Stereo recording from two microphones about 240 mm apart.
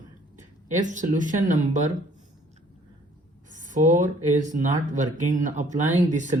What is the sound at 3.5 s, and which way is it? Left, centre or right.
Speech, right.